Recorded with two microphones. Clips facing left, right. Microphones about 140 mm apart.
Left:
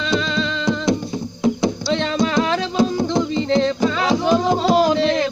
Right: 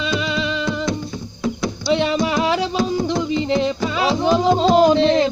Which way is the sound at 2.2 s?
15° right (ahead or behind).